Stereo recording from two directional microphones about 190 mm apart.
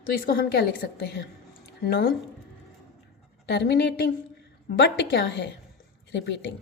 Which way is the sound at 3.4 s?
60° left (ahead or behind).